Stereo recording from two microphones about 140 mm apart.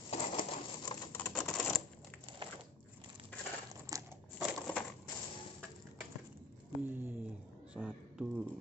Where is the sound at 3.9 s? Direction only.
25° right (ahead or behind).